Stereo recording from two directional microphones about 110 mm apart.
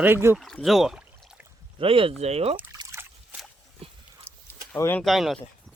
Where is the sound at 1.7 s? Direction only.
55° right (ahead or behind).